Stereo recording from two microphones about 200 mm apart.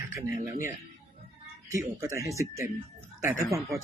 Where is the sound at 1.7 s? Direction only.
15° right (ahead or behind).